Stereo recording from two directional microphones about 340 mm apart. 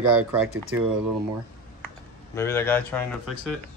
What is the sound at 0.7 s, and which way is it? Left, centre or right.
Speech, right.